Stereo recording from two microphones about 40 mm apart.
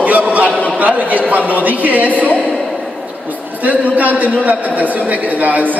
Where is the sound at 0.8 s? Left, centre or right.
Right.